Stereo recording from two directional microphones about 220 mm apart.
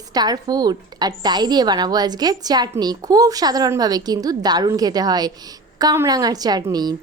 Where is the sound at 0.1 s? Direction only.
20° right (ahead or behind).